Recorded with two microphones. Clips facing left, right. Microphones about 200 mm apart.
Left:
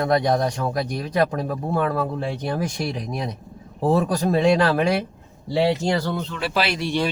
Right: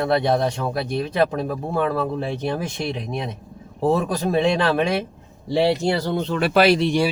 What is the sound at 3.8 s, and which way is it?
Speech, centre (ahead or behind).